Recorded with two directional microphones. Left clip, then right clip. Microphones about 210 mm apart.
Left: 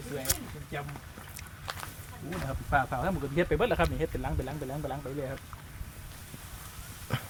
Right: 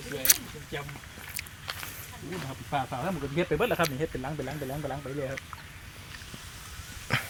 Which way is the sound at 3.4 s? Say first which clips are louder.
Right 1 dB; 35° right (ahead or behind).